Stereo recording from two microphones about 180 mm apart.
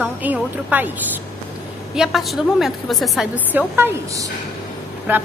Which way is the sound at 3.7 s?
15° right (ahead or behind).